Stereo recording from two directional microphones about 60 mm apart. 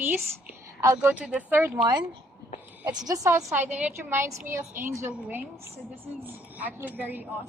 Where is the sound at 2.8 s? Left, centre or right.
Right.